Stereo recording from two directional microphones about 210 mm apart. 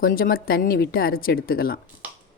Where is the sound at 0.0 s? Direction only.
45° left (ahead or behind).